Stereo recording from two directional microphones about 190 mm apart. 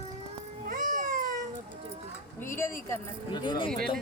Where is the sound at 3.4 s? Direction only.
25° left (ahead or behind).